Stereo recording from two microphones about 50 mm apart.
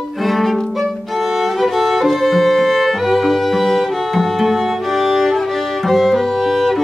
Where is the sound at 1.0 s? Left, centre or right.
Centre.